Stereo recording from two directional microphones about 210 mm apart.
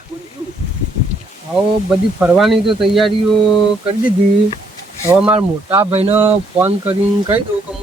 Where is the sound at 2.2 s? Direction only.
5° right (ahead or behind).